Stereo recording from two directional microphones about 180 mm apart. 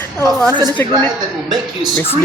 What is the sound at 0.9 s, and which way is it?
Speech, 25° right (ahead or behind).